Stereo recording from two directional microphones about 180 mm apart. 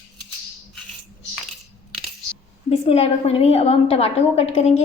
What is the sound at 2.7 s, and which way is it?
A woman's voice, 35° left (ahead or behind).